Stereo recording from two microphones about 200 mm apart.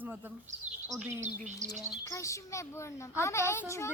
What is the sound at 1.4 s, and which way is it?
Chirp, 35° right (ahead or behind).